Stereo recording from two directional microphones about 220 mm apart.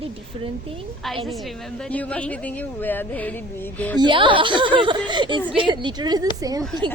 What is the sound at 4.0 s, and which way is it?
A woman's voice, 20° right (ahead or behind).